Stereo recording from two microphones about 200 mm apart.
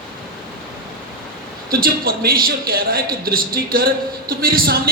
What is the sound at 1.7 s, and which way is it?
A man's voice, 50° right (ahead or behind).